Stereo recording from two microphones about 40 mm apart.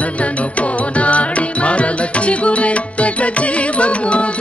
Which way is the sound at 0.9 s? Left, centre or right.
Left.